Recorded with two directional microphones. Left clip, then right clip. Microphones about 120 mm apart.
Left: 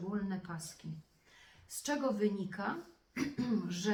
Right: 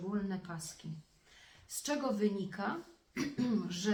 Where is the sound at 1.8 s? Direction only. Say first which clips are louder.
Even; 25° right (ahead or behind).